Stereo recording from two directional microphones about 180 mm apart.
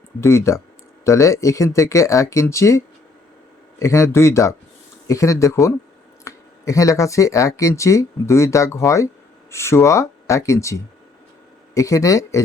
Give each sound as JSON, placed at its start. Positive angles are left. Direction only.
{"t": 0.2, "sound": "speech", "side_deg": 15}